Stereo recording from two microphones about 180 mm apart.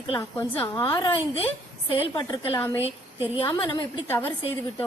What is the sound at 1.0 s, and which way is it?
A woman's voice, 30° left (ahead or behind).